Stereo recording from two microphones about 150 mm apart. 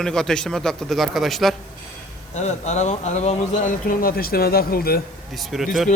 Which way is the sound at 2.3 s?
50° left (ahead or behind).